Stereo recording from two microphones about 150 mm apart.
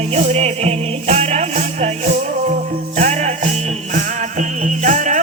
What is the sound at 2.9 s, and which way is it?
Music, 50° right (ahead or behind).